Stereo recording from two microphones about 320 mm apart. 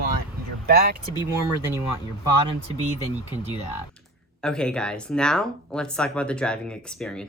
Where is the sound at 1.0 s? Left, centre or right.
Centre.